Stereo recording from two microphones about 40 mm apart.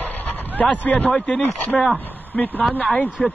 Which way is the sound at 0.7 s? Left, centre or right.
Left.